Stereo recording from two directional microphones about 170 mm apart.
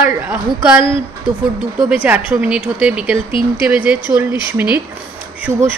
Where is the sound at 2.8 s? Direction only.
5° right (ahead or behind).